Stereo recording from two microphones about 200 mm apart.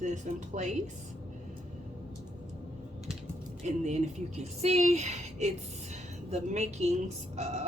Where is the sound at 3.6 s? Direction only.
35° right (ahead or behind).